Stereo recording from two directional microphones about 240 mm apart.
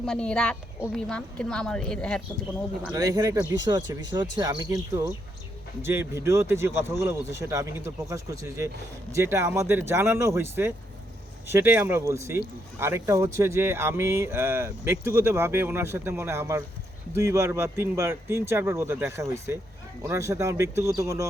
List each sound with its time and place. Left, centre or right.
0.0 s a woman's voice: centre
2.8 s speech: centre